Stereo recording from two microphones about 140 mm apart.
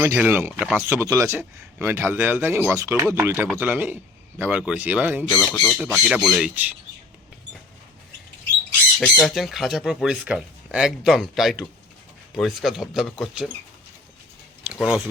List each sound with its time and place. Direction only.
0.0 s speech: 15° right (ahead or behind)
5.3 s speech: 10° left (ahead or behind)
5.7 s speech: 5° right (ahead or behind)
6.5 s speech: 10° right (ahead or behind)
9.0 s speech: 5° left (ahead or behind)
14.6 s a sound: 10° right (ahead or behind)